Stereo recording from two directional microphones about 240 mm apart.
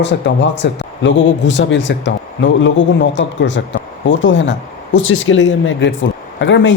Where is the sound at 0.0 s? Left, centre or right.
Left.